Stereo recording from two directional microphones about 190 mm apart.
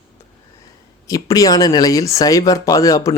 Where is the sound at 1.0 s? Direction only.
20° left (ahead or behind).